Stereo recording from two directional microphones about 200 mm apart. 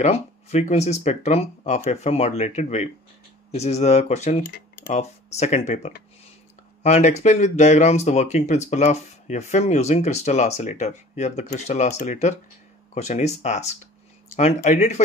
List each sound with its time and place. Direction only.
0.0 s speech: 30° left (ahead or behind)